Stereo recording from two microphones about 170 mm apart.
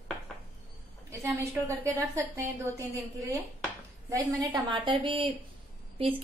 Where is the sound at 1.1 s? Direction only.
15° right (ahead or behind).